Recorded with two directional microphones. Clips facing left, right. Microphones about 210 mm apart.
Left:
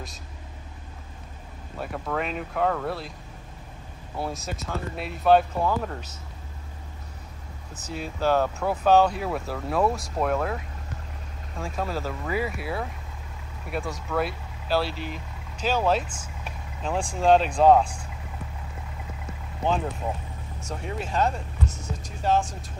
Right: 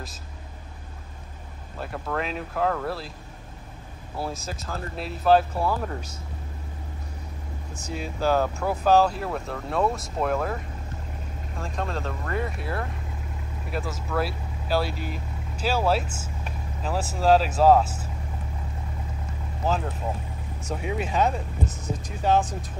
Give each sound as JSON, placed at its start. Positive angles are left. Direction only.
{"t": 1.8, "sound": "speech", "side_deg": 0}
{"t": 4.2, "sound": "speech", "side_deg": 0}
{"t": 7.8, "sound": "speech", "side_deg": 5}
{"t": 14.9, "sound": "speech", "side_deg": -45}
{"t": 15.1, "sound": "speech", "side_deg": -5}
{"t": 19.6, "sound": "speech", "side_deg": 0}